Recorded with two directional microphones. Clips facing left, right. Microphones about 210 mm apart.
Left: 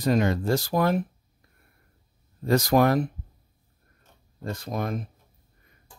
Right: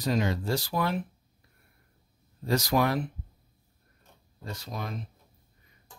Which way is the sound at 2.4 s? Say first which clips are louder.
Left 5 dB; 55° left (ahead or behind).